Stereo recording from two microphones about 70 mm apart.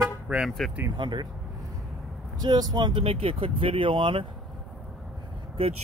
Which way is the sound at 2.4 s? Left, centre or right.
Right.